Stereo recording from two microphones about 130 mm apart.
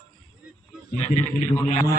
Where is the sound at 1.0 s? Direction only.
55° left (ahead or behind).